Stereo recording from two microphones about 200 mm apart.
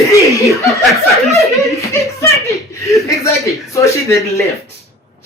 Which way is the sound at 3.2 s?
15° left (ahead or behind).